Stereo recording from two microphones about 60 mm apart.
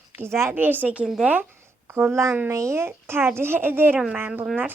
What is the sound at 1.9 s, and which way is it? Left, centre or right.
A woman's voice, right.